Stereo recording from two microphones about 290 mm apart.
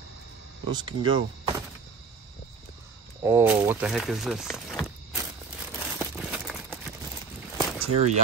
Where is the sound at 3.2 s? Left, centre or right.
Centre.